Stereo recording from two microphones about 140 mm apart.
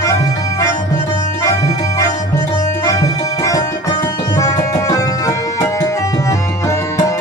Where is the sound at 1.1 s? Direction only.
25° left (ahead or behind).